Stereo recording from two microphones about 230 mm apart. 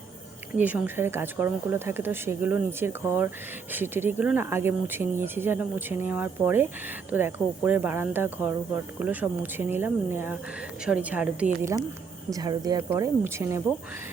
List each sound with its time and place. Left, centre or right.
0.5 s a woman's voice: centre